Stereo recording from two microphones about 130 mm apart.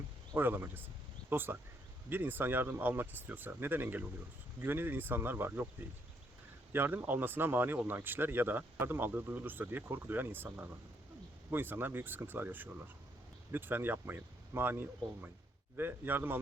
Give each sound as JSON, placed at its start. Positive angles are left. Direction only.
{"t": 0.3, "sound": "speech", "side_deg": -15}
{"t": 6.7, "sound": "speech", "side_deg": -15}